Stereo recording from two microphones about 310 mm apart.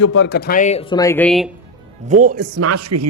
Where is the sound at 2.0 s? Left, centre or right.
Right.